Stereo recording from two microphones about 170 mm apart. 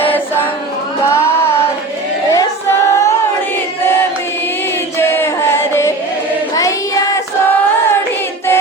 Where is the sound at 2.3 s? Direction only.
20° left (ahead or behind).